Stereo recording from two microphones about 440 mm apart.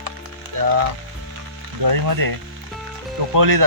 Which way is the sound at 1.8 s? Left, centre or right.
Right.